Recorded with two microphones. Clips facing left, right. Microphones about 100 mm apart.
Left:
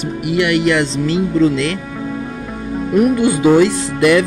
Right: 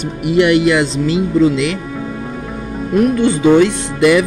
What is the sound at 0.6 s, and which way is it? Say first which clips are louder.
Speech: right 2 dB; 10° right (ahead or behind).